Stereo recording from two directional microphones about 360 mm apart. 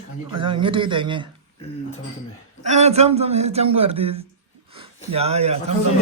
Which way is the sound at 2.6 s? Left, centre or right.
Centre.